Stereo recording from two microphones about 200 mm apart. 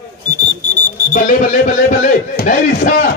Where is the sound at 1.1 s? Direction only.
40° left (ahead or behind).